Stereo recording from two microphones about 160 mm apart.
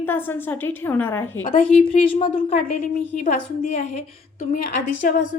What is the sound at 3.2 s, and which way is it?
A woman's voice, 55° left (ahead or behind).